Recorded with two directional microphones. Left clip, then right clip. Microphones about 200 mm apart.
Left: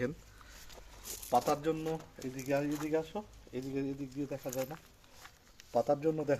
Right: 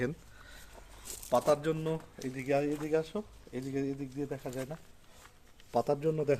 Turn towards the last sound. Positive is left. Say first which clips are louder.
# right 1 dB
turn(degrees=-60)  # may be behind; listen again after turning